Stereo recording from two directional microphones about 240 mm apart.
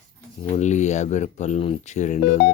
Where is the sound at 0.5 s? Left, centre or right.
Left.